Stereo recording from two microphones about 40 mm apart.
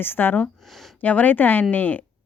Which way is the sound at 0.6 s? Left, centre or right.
Centre.